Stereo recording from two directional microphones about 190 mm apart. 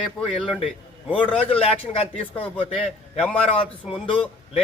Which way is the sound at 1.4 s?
30° left (ahead or behind).